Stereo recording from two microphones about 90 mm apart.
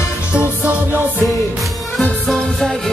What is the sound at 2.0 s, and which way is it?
Music, 5° left (ahead or behind).